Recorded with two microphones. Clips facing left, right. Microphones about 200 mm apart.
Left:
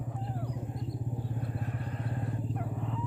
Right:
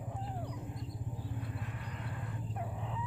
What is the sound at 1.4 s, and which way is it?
Vehicle, 40° left (ahead or behind).